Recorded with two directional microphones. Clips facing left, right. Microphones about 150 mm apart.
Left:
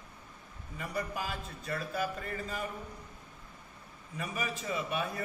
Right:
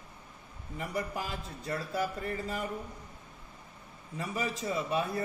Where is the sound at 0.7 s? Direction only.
25° right (ahead or behind).